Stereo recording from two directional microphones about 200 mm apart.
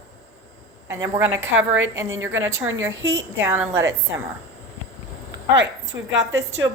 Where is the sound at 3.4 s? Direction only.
10° right (ahead or behind).